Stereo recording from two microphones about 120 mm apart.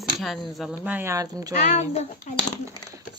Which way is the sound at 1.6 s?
65° left (ahead or behind).